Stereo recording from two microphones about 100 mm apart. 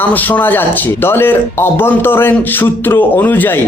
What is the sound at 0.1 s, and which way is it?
A man's voice, 20° left (ahead or behind).